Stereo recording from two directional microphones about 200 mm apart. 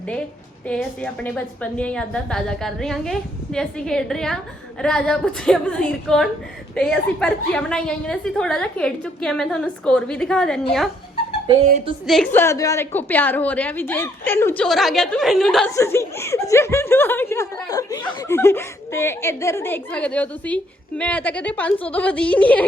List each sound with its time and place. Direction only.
0.7 s a woman's voice: 5° left (ahead or behind)
12.0 s speech: 5° left (ahead or behind)
15.7 s speech: 15° left (ahead or behind)